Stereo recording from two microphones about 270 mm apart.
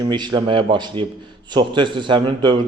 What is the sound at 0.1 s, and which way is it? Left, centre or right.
A man's voice, centre.